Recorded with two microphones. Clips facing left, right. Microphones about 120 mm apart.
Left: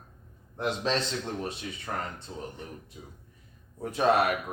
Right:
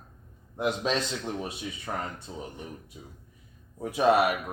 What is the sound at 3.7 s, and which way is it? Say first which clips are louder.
Speech: right 2 dB; 10° right (ahead or behind).